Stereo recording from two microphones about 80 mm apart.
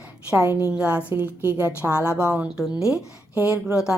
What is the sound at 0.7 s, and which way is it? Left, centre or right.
A woman's voice, centre.